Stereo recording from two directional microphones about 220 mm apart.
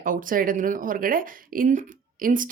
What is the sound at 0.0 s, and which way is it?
Speech, 40° right (ahead or behind).